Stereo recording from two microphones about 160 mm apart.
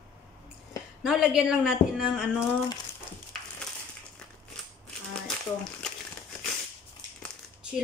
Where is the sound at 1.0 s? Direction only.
5° right (ahead or behind).